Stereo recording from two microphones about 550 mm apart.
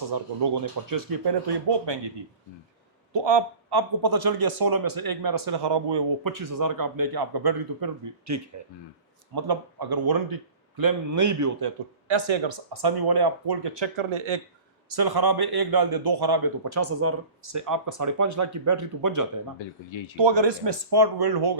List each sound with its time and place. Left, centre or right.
0.9 s speech: right
3.1 s a man's voice: right
8.3 s speech: right
9.3 s a man's voice: right
11.6 s speech: right
14.8 s a man's voice: right
16.6 s a man's voice: right
19.5 s speech: left
20.1 s a man's voice: right